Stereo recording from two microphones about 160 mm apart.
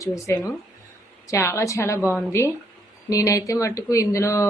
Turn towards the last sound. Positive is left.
turn(degrees=20)  # may be behind; listen again after turning